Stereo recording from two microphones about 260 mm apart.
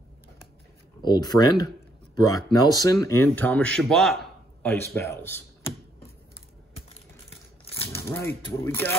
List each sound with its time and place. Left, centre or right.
1.0 s speech: centre
6.9 s crumpling: left
7.7 s speech: centre